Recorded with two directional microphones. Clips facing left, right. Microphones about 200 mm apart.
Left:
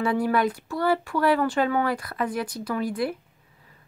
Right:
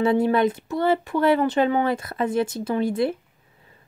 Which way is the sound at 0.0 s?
25° right (ahead or behind).